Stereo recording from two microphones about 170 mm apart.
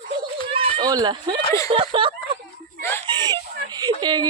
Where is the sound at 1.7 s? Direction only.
30° right (ahead or behind).